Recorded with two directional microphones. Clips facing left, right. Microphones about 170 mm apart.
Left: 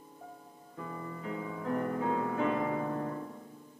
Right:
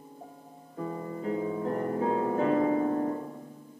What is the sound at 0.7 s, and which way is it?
Music, 30° right (ahead or behind).